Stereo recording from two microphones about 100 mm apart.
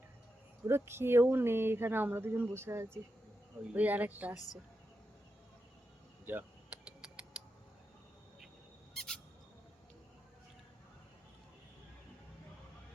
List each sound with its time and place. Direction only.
0.7 s speech: 25° right (ahead or behind)
6.3 s speech: 15° right (ahead or behind)
9.0 s a sound: 5° left (ahead or behind)